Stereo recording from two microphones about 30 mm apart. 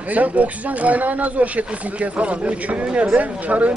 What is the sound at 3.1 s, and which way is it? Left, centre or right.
Speech, right.